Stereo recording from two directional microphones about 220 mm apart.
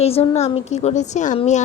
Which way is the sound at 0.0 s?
25° left (ahead or behind).